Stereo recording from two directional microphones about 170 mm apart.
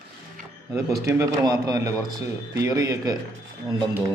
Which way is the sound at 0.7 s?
20° right (ahead or behind).